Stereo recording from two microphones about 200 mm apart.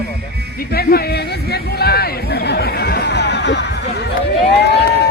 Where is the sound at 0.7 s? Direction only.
50° left (ahead or behind).